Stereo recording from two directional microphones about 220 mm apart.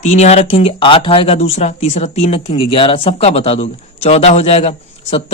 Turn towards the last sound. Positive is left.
turn(degrees=25)  # may be behind; listen again after turning